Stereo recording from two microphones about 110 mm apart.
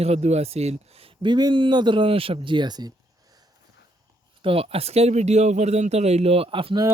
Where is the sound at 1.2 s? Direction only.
40° right (ahead or behind).